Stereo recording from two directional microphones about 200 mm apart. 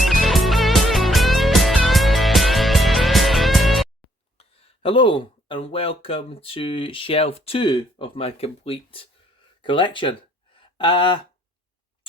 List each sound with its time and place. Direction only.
0.0 s music: centre (ahead or behind)
4.4 s speech: 30° left (ahead or behind)
10.6 s a sound: 25° left (ahead or behind)